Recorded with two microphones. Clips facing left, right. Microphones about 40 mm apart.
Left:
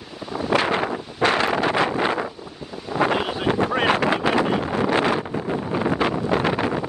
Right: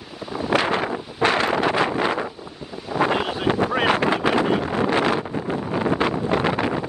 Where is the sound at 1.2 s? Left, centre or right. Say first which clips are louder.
Even; left.